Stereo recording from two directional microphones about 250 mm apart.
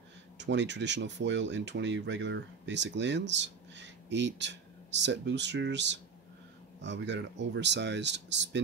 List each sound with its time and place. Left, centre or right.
0.4 s speech: right